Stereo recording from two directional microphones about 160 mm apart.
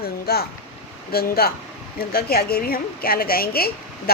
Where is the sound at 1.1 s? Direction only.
75° left (ahead or behind).